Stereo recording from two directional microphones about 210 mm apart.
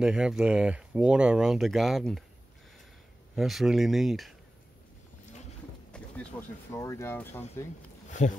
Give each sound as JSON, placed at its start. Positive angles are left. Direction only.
{"t": 0.0, "sound": "speech", "side_deg": -5}
{"t": 3.3, "sound": "speech", "side_deg": 0}
{"t": 5.9, "sound": "a sound", "side_deg": 5}
{"t": 6.7, "sound": "speech", "side_deg": 15}
{"t": 8.1, "sound": "speech", "side_deg": 35}